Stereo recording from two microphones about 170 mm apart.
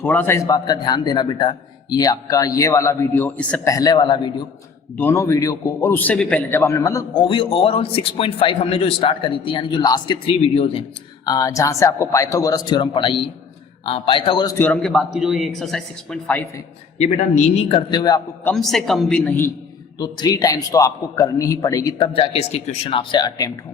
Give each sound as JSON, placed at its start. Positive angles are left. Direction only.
{"t": 0.0, "sound": "a man's voice", "side_deg": 10}
{"t": 3.7, "sound": "a man's voice", "side_deg": 20}
{"t": 4.9, "sound": "a man's voice", "side_deg": 15}
{"t": 11.3, "sound": "a man's voice", "side_deg": 20}
{"t": 14.6, "sound": "speech", "side_deg": 5}
{"t": 17.0, "sound": "a man's voice", "side_deg": 40}
{"t": 18.4, "sound": "speech", "side_deg": 0}
{"t": 20.0, "sound": "a man's voice", "side_deg": 25}